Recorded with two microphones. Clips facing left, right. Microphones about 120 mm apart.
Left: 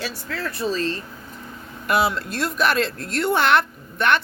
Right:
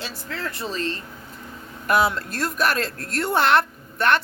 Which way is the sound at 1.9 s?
45° right (ahead or behind).